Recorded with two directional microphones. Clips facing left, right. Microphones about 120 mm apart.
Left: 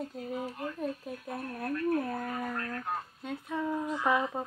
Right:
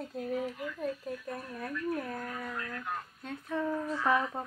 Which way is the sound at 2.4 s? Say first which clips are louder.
Left 3 dB; 45° left (ahead or behind).